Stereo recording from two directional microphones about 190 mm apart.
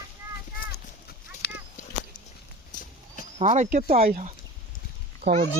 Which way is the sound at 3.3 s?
35° right (ahead or behind).